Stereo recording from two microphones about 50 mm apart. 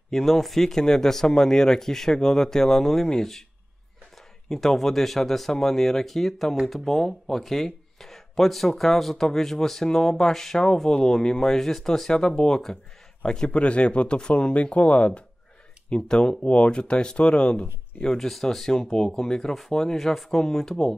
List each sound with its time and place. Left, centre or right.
0.1 s speech: centre
4.5 s speech: centre